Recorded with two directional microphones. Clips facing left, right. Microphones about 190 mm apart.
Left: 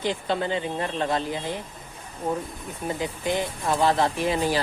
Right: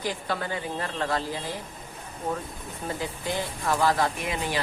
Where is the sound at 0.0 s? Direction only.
25° left (ahead or behind).